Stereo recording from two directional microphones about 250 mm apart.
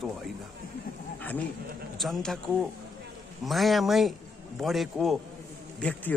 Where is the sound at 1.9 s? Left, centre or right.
Centre.